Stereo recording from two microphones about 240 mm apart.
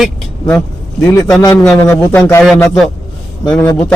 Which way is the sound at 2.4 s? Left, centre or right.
Centre.